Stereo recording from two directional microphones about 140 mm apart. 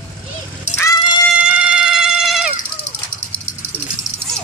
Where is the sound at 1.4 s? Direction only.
10° right (ahead or behind).